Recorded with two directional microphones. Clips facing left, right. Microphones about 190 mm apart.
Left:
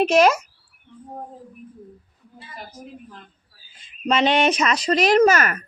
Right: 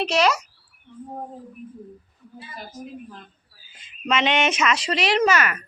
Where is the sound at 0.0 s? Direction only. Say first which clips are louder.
Left 5 dB; 50° left (ahead or behind).